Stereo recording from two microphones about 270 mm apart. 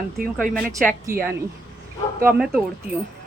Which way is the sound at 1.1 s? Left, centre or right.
Right.